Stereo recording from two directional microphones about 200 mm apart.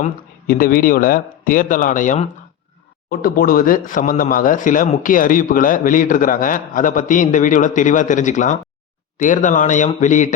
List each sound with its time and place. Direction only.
0.0 s speech: 45° left (ahead or behind)